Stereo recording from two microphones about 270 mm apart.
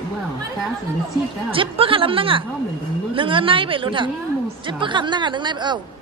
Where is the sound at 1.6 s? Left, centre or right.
Centre.